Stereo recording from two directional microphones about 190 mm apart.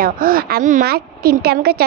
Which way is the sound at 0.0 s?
50° right (ahead or behind).